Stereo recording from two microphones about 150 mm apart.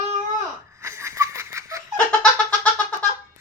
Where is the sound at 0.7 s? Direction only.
20° right (ahead or behind).